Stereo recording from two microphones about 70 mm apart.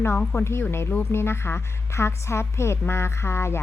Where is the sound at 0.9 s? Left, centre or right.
Left.